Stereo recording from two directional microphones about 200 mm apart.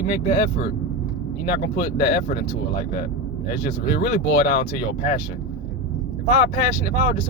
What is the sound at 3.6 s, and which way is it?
Speech, 50° left (ahead or behind).